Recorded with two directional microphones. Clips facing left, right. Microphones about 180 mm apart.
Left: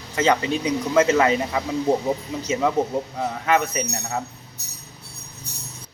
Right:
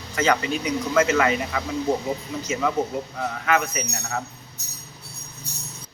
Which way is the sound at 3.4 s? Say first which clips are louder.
Left 2 dB; 30° left (ahead or behind).